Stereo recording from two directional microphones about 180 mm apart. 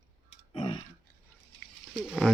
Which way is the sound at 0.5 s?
30° left (ahead or behind).